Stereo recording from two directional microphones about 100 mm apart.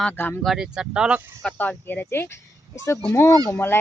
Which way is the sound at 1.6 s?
15° left (ahead or behind).